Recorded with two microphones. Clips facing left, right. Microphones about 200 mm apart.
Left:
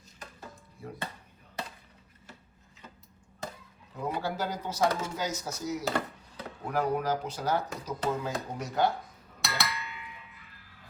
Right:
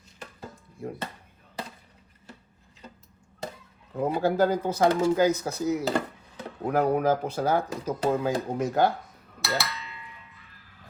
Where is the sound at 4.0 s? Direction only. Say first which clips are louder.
Right 9 dB; 50° right (ahead or behind).